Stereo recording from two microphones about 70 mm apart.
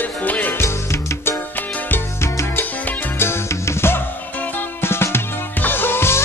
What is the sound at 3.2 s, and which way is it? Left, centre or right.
Music, left.